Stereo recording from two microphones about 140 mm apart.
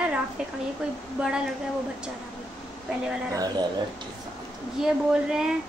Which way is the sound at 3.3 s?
30° right (ahead or behind).